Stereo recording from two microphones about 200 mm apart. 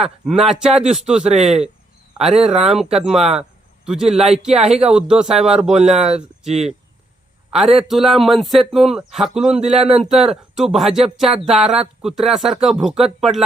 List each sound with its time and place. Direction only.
0.0 s speech: centre (ahead or behind)
1.2 s speech: 35° right (ahead or behind)
1.5 s speech: 5° right (ahead or behind)
4.2 s speech: 30° right (ahead or behind)
4.9 s speech: 5° right (ahead or behind)
5.7 s speech: 30° right (ahead or behind)
7.5 s a man's voice: centre (ahead or behind)
9.5 s speech: 30° right (ahead or behind)
10.2 s speech: centre (ahead or behind)